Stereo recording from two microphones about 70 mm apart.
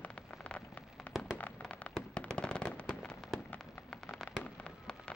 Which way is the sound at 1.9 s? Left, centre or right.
Centre.